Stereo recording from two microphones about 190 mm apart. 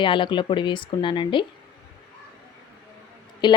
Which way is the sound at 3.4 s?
25° left (ahead or behind).